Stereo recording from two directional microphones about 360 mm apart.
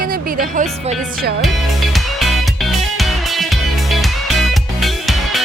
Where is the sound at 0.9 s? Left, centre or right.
Centre.